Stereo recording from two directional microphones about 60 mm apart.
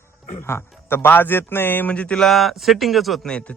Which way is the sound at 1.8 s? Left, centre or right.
Left.